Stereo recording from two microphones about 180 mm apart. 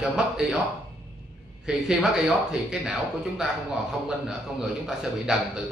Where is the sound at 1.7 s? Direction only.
Centre (ahead or behind).